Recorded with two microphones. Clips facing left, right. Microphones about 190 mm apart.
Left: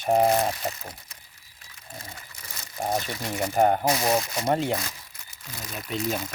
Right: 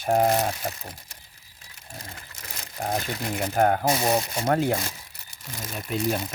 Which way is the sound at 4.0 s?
15° right (ahead or behind).